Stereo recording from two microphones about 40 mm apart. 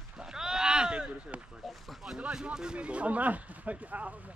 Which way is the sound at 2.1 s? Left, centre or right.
Right.